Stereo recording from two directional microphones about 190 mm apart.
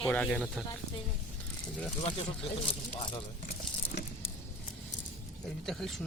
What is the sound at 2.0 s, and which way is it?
Speech, 30° left (ahead or behind).